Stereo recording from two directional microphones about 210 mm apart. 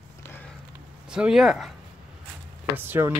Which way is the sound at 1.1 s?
5° right (ahead or behind).